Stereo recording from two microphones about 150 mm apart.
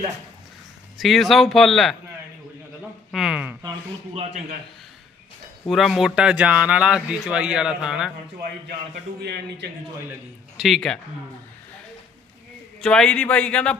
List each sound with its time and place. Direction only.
0.9 s speech: centre (ahead or behind)
3.1 s speech: 5° right (ahead or behind)
4.1 s a man's voice: 40° right (ahead or behind)
5.6 s speech: centre (ahead or behind)
9.2 s a man's voice: 90° right
10.6 s speech: 5° left (ahead or behind)
12.8 s a man's voice: 5° left (ahead or behind)